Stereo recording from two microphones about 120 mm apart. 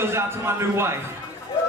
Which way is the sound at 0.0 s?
20° right (ahead or behind).